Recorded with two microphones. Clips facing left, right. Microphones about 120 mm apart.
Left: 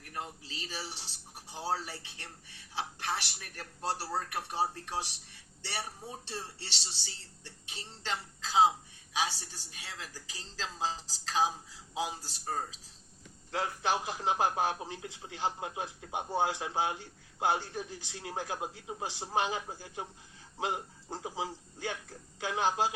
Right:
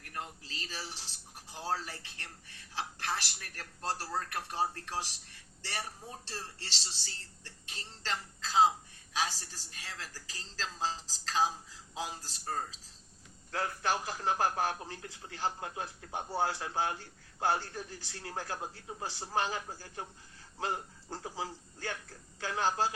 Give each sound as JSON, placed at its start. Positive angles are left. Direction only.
{"t": 0.1, "sound": "speech", "side_deg": 20}
{"t": 1.8, "sound": "a man's voice", "side_deg": 15}